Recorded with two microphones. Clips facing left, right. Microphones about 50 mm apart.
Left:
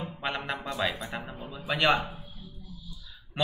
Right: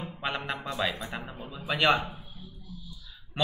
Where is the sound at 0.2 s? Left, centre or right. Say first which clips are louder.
Even; centre.